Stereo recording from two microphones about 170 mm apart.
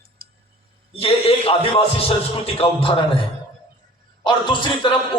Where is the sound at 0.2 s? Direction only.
60° right (ahead or behind).